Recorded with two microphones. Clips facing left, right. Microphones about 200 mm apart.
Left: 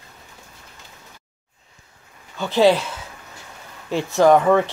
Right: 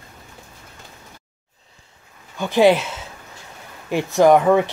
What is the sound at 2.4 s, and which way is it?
Speech, 15° right (ahead or behind).